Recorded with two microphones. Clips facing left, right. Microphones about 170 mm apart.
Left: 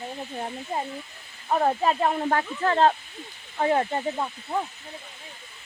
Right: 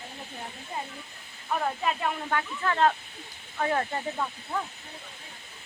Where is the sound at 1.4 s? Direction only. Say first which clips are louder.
Left 6 dB; 40° left (ahead or behind); by 4.6 s 25° left (ahead or behind).